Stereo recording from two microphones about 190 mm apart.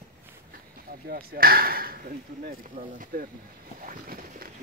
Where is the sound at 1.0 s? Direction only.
50° right (ahead or behind).